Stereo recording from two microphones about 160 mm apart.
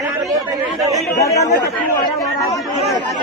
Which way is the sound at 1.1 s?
20° left (ahead or behind).